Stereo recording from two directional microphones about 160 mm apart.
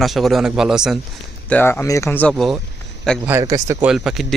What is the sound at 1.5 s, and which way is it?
Speech, 10° left (ahead or behind).